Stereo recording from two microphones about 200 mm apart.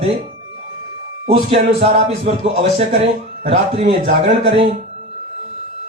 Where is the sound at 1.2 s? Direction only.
30° right (ahead or behind).